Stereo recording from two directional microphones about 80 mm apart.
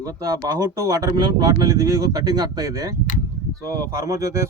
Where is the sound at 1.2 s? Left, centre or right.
Right.